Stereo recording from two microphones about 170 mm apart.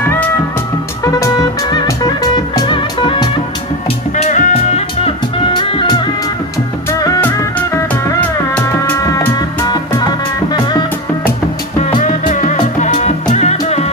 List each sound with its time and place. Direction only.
0.0 s music: 10° left (ahead or behind); by 3.3 s 30° left (ahead or behind)
4.2 s music: 45° left (ahead or behind); by 6.0 s 30° left (ahead or behind)
6.9 s music: 15° left (ahead or behind)
12.0 s music: 45° left (ahead or behind)